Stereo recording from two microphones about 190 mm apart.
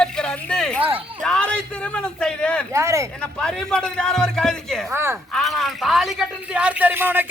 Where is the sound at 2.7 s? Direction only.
15° right (ahead or behind).